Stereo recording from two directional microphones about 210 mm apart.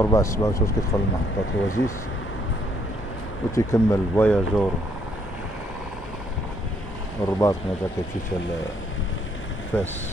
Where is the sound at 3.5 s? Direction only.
15° left (ahead or behind).